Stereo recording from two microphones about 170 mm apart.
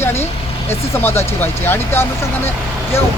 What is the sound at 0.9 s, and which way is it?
Speech, 15° left (ahead or behind).